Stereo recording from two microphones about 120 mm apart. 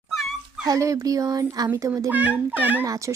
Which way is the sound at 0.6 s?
30° right (ahead or behind).